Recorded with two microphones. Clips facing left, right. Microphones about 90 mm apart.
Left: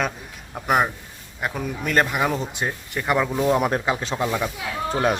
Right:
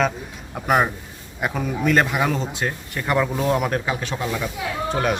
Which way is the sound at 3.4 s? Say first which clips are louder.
Left 1 dB; 20° left (ahead or behind).